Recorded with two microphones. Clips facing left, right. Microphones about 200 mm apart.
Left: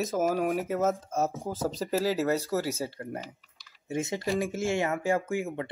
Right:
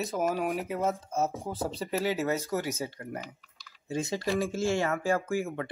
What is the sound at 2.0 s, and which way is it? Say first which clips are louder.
Speech: left 1 dB; 35° left (ahead or behind).